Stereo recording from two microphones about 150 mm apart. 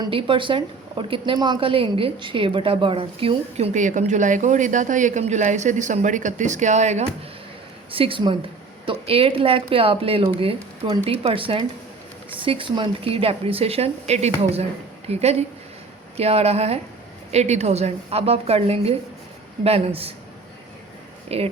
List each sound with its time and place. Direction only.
0.0 s a woman's voice: 35° right (ahead or behind)
3.7 s speech: 55° right (ahead or behind)
7.9 s a woman's voice: 40° right (ahead or behind)
21.2 s speech: 40° right (ahead or behind)